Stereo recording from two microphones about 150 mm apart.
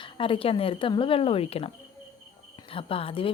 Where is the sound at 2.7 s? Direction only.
40° left (ahead or behind).